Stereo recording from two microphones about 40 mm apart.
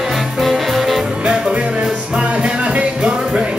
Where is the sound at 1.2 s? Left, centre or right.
Right.